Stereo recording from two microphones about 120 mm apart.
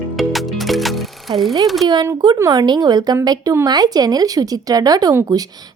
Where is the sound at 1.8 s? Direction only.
35° right (ahead or behind).